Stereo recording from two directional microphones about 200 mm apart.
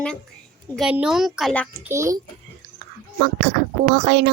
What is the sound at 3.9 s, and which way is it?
Speech, 55° right (ahead or behind).